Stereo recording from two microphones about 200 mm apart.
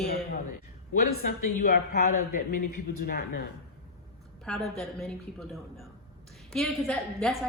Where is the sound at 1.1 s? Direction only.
50° left (ahead or behind).